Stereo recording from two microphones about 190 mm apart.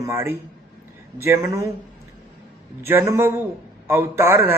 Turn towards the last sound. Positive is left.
turn(degrees=-10)  # may be behind; listen again after turning